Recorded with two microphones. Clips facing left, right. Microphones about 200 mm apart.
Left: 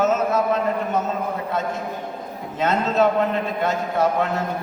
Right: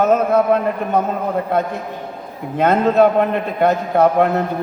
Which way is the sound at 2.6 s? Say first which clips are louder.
Right 6 dB; 55° right (ahead or behind).